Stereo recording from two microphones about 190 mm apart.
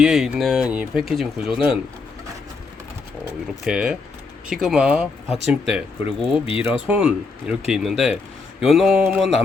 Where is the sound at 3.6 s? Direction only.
5° right (ahead or behind).